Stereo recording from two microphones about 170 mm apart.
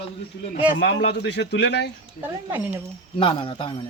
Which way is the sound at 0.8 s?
85° left.